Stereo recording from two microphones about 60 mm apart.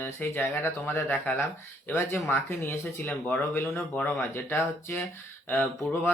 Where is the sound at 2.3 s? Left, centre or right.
Left.